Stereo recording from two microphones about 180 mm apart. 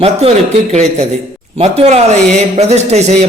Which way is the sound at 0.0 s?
35° right (ahead or behind).